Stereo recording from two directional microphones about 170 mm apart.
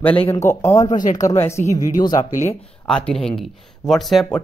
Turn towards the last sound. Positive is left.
turn(degrees=5)  # may be behind; listen again after turning